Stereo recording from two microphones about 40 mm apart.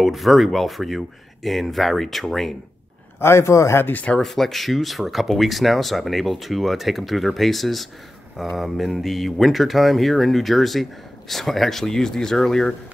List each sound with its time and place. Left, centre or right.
0.0 s speech: centre
3.2 s speech: left
3.8 s speech: left
4.2 s speech: centre